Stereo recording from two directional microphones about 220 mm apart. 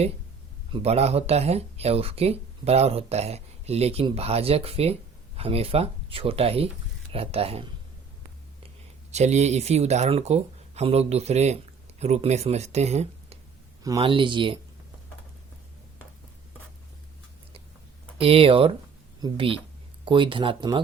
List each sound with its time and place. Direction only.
0.7 s speech: 30° right (ahead or behind)
9.1 s speech: 30° right (ahead or behind)
13.8 s speech: 20° right (ahead or behind)
18.2 s speech: 25° right (ahead or behind)